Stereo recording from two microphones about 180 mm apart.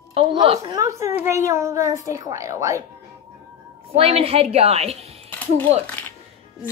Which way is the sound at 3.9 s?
35° right (ahead or behind).